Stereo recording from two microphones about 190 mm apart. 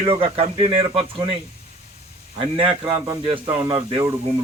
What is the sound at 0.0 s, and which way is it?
Speech, 25° right (ahead or behind).